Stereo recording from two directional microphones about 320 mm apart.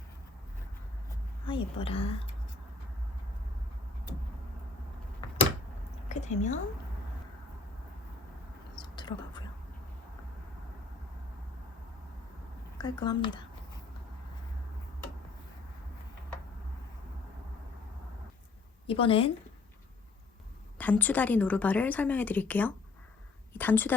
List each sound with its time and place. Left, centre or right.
1.5 s a woman's voice: centre
6.1 s a woman's voice: left
8.8 s a sound: centre
12.8 s a woman's voice: centre
18.9 s a woman's voice: centre
20.7 s a woman's voice: centre